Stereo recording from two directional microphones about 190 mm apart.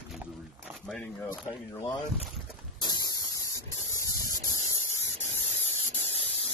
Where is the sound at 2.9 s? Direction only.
20° left (ahead or behind).